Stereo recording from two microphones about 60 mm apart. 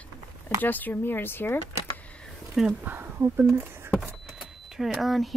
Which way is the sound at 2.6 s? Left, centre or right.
Centre.